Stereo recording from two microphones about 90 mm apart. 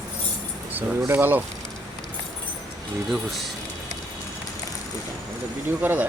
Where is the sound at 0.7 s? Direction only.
20° right (ahead or behind).